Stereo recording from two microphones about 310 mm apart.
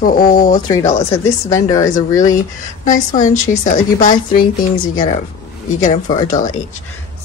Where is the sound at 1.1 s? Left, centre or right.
Centre.